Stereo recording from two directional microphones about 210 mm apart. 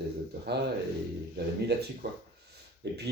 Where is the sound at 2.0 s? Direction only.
50° right (ahead or behind).